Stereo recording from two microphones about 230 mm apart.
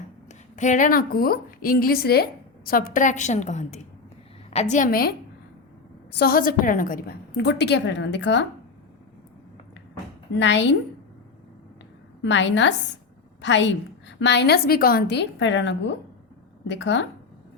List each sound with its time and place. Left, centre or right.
0.3 s a woman's voice: left
6.1 s a woman's voice: left
10.4 s a woman's voice: left
12.2 s a woman's voice: left